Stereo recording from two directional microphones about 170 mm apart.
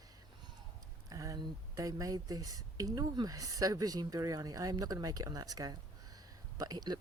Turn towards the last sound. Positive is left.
turn(degrees=-25)  # may be behind; listen again after turning